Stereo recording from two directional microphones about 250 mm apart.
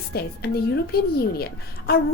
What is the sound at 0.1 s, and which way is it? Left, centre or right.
Speech, left.